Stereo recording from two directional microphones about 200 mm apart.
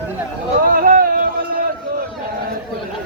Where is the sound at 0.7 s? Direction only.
45° right (ahead or behind).